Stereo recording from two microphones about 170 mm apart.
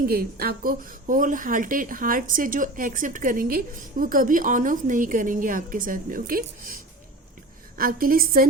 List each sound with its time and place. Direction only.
0.1 s speech: 65° right (ahead or behind)
7.8 s a woman's voice: 55° right (ahead or behind)